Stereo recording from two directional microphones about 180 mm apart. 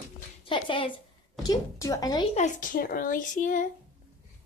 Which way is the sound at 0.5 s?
30° left (ahead or behind).